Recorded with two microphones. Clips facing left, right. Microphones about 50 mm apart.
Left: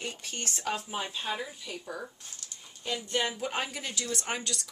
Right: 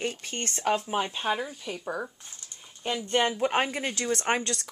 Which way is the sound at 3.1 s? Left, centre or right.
Right.